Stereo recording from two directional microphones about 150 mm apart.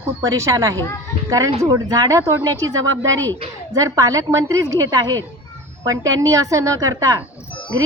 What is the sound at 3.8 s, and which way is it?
A woman's voice, 20° right (ahead or behind).